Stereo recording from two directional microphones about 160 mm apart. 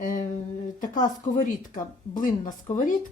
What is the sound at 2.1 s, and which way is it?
Speech, 55° left (ahead or behind).